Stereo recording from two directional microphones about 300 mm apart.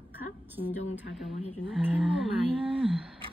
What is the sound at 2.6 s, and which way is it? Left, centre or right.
Speech, centre.